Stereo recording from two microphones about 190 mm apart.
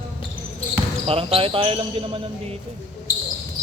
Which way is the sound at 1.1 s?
30° right (ahead or behind).